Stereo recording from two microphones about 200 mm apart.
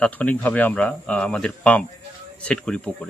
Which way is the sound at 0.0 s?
5° left (ahead or behind).